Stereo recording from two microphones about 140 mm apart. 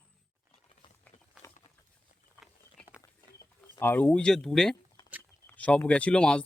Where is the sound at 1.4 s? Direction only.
20° left (ahead or behind).